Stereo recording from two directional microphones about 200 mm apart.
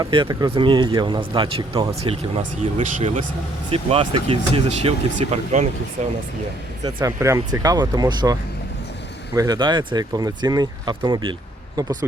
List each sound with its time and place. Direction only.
0.0 s speech: 25° right (ahead or behind)
6.8 s speech: 15° right (ahead or behind)